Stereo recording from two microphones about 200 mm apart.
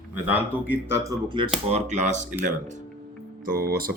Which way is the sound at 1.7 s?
35° right (ahead or behind).